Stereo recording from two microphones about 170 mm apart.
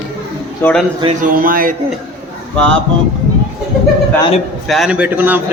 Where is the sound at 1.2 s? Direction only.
55° right (ahead or behind).